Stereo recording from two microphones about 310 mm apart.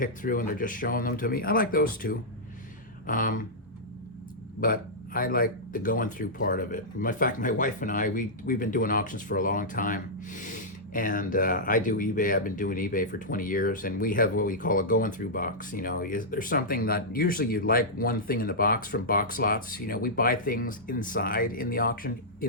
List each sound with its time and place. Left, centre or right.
0.0 s speech: left
4.6 s speech: left